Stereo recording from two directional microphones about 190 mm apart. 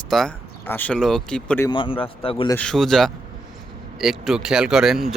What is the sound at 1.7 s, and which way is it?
Speech, 25° left (ahead or behind).